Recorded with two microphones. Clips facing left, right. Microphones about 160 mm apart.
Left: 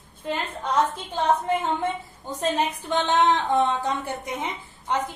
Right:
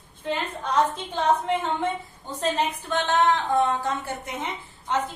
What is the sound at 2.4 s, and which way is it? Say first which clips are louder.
A woman's voice: left 1 dB; 15° left (ahead or behind).